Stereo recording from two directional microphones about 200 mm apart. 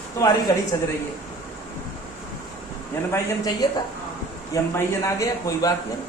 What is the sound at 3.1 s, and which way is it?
Speech, 20° left (ahead or behind).